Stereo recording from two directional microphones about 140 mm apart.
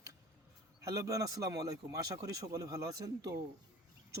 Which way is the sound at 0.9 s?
25° right (ahead or behind).